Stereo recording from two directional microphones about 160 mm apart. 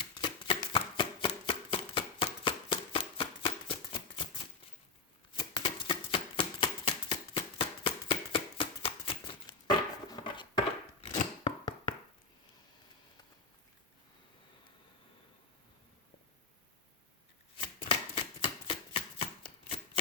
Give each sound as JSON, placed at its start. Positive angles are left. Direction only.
{"t": 0.0, "sound": "shuffling cards", "side_deg": 30}
{"t": 5.4, "sound": "a sound", "side_deg": 30}
{"t": 11.0, "sound": "scissors", "side_deg": 35}
{"t": 17.6, "sound": "chopping", "side_deg": 35}